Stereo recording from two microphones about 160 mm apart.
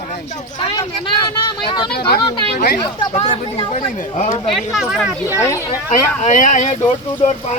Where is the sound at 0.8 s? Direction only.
25° left (ahead or behind).